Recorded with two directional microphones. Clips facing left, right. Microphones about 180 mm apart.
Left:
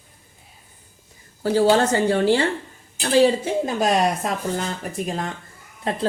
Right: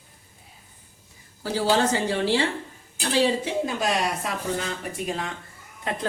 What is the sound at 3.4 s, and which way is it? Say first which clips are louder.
Speech: left 4 dB; 45° left (ahead or behind).